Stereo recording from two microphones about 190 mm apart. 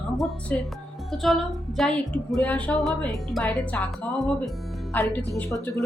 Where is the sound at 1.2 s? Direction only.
Centre (ahead or behind).